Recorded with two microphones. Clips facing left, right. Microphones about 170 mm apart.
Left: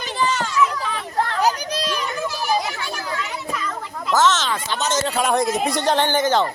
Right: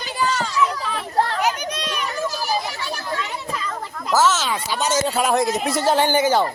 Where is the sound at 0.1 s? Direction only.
5° right (ahead or behind).